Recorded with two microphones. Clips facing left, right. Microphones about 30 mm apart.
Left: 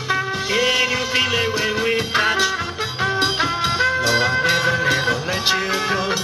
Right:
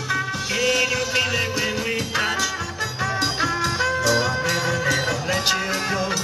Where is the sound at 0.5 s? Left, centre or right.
Left.